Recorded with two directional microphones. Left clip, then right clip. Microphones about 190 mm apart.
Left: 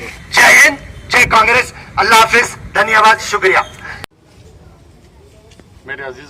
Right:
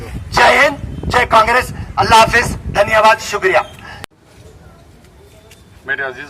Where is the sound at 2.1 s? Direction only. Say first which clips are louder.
Even; 20° right (ahead or behind).